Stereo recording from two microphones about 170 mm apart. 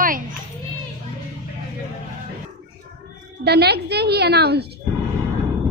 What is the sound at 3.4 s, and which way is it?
A woman's voice, 70° right (ahead or behind).